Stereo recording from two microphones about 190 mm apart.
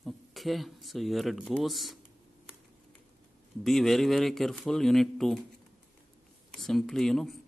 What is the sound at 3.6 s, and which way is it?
Speech, centre (ahead or behind).